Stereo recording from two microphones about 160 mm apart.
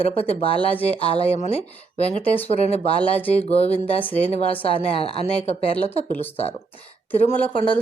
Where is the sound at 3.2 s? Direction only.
10° left (ahead or behind).